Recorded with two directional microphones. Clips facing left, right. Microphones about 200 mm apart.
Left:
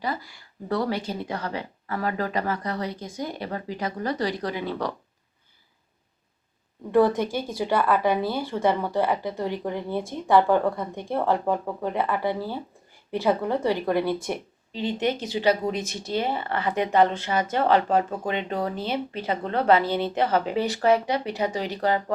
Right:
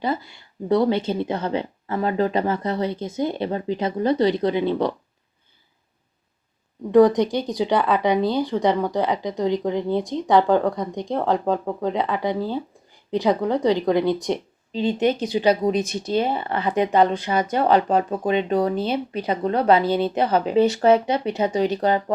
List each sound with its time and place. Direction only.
0.0 s a woman's voice: 25° right (ahead or behind)
6.9 s a woman's voice: 15° right (ahead or behind)